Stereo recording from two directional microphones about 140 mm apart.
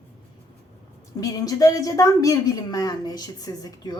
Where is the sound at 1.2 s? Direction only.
25° left (ahead or behind).